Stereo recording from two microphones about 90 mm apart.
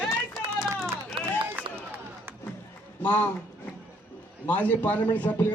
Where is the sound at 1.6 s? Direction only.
20° right (ahead or behind).